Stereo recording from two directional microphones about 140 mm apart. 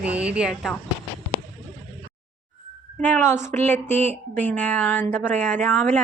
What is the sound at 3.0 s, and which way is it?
A woman's voice, 15° left (ahead or behind).